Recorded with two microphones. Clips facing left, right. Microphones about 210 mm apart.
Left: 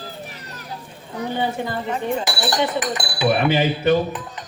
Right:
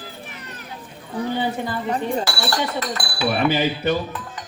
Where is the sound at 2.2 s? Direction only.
20° left (ahead or behind).